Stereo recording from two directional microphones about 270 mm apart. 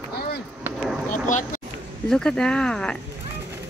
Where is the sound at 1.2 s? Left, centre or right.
Left.